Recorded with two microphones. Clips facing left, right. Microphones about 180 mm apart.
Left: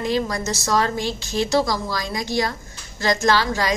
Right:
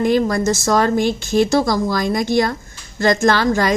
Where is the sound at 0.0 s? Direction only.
50° right (ahead or behind).